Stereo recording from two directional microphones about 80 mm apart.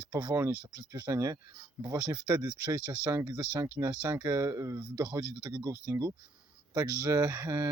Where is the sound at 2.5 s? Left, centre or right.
Centre.